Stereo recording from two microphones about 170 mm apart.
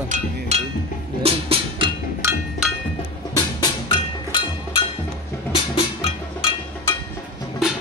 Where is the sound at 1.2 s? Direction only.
35° right (ahead or behind).